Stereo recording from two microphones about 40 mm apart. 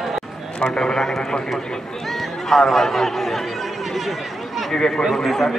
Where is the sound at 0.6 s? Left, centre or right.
Centre.